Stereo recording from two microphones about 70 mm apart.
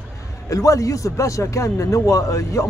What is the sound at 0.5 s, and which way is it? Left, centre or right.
A man's voice, left.